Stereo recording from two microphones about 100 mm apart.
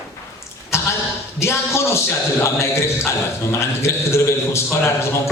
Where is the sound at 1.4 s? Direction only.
25° left (ahead or behind).